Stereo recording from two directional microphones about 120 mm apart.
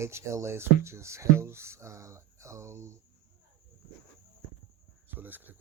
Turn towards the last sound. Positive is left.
turn(degrees=-15)  # may be behind; listen again after turning